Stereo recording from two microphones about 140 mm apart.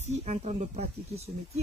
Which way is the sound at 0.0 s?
50° right (ahead or behind).